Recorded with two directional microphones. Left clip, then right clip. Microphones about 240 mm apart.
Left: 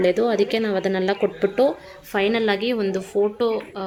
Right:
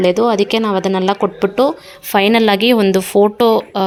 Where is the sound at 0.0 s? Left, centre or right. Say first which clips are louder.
Right 6 dB; right.